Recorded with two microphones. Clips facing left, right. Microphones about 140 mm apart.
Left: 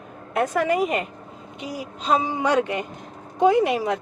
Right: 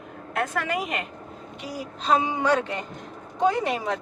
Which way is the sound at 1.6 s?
40° right (ahead or behind).